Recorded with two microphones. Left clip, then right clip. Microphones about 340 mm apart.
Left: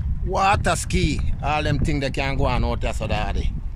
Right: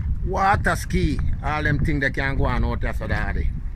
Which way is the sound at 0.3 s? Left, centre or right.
Centre.